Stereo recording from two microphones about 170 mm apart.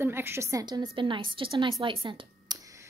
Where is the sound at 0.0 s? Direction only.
15° right (ahead or behind).